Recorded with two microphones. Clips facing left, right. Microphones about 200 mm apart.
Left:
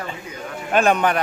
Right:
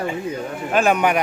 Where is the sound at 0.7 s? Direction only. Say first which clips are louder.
Even; 5° right (ahead or behind).